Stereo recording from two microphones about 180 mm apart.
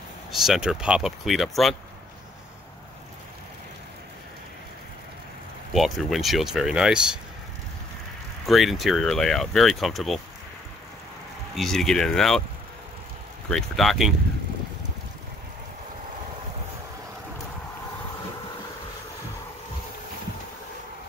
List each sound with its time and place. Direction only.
0.4 s speech: centre (ahead or behind)
5.7 s speech: centre (ahead or behind)
8.5 s speech: centre (ahead or behind)
11.5 s speech: centre (ahead or behind)
13.5 s speech: centre (ahead or behind)